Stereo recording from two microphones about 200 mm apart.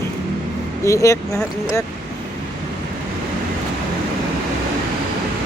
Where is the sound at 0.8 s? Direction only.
15° left (ahead or behind).